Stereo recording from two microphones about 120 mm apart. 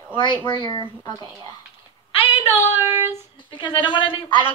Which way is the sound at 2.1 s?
55° left (ahead or behind).